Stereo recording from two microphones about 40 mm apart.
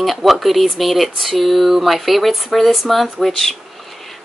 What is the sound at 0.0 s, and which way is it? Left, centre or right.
Speech, centre.